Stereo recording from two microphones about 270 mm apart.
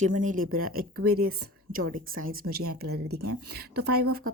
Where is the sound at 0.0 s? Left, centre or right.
Right.